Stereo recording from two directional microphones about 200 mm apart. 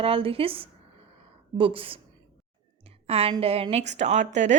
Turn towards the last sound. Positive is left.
turn(degrees=-35)  # may be behind; listen again after turning